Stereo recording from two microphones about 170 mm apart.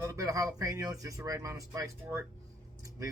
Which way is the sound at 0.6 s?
20° right (ahead or behind).